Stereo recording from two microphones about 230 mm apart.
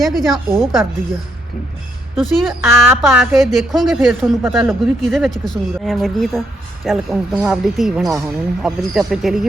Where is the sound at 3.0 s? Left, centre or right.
Centre.